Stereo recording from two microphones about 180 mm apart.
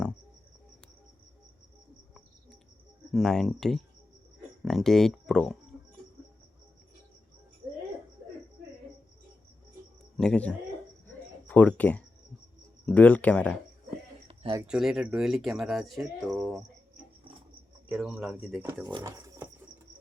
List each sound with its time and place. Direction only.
3.1 s speech: centre (ahead or behind)
10.2 s speech: 5° left (ahead or behind)
14.3 s a sound: 30° right (ahead or behind)
14.7 s speech: centre (ahead or behind)
17.8 s speech: 5° right (ahead or behind)